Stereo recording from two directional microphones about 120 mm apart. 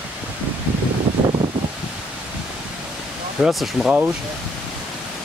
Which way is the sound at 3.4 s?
Centre (ahead or behind).